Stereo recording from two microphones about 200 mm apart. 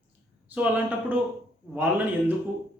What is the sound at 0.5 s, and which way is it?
Speech, 5° right (ahead or behind).